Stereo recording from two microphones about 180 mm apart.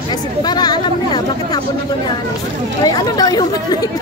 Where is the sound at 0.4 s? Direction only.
25° left (ahead or behind).